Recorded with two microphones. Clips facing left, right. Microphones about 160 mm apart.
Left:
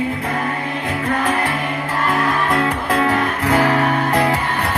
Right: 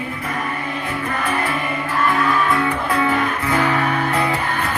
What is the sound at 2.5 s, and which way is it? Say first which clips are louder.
Music: left 1 dB; 75° left (ahead or behind).